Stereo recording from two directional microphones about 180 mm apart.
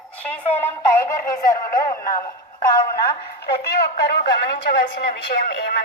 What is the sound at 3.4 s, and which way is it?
Speech, 65° left (ahead or behind).